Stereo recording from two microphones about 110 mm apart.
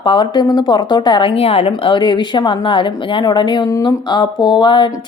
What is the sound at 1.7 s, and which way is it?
A woman's voice, 45° left (ahead or behind).